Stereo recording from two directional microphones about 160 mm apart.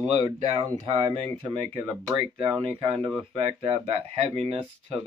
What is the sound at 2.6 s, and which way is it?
Speech, 30° right (ahead or behind).